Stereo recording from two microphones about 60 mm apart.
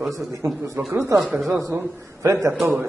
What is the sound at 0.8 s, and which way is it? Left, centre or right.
Speech, right.